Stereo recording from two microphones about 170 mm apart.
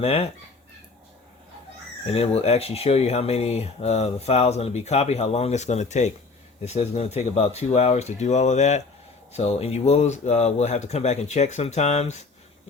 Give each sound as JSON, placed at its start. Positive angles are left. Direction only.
{"t": 0.0, "sound": "speech", "side_deg": 35}
{"t": 2.0, "sound": "speech", "side_deg": 35}